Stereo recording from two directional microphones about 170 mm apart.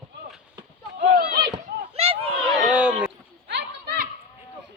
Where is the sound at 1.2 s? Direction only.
65° right (ahead or behind).